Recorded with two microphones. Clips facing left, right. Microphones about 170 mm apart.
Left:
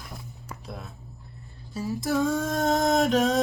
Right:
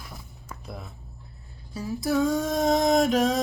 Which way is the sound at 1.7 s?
Centre (ahead or behind).